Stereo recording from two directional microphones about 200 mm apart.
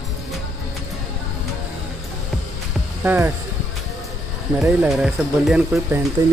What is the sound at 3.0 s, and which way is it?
Speech, 10° right (ahead or behind).